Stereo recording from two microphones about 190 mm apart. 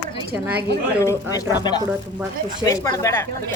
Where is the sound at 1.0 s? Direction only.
15° left (ahead or behind).